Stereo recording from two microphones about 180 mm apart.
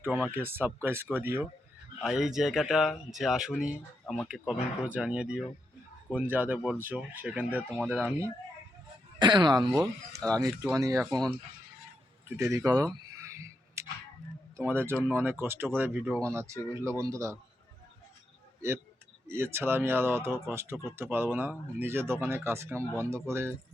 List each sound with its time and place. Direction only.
0.0 s speech: 10° right (ahead or behind)
4.0 s speech: 10° left (ahead or behind)
4.9 s speech: 5° right (ahead or behind)
9.1 s speech: 25° right (ahead or behind)
11.0 s speech: 5° left (ahead or behind)
12.4 s a sound: 15° right (ahead or behind)
14.5 s speech: 15° right (ahead or behind)
19.3 s speech: 15° right (ahead or behind)